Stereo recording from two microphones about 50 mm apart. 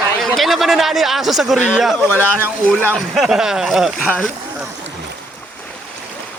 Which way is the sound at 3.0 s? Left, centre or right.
Centre.